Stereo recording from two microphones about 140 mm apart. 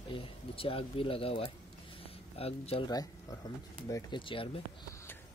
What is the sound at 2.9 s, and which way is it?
Speech, 25° left (ahead or behind).